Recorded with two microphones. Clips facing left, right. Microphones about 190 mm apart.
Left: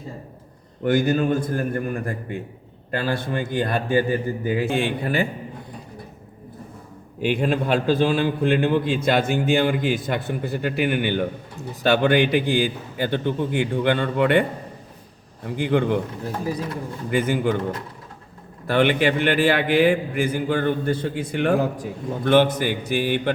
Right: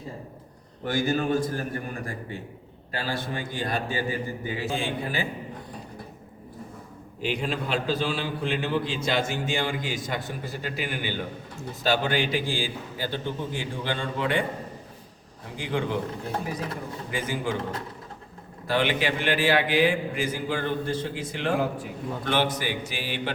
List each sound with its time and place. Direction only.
0.9 s a man's voice: 55° left (ahead or behind)
7.2 s a man's voice: 55° left (ahead or behind)
15.4 s a man's voice: 55° left (ahead or behind)
17.1 s a man's voice: 60° left (ahead or behind)
18.7 s a man's voice: 55° left (ahead or behind)